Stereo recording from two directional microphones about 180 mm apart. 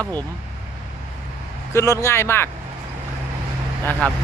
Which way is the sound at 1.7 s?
15° left (ahead or behind).